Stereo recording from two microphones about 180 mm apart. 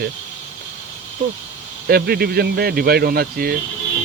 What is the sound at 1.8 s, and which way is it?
Speech, 60° right (ahead or behind).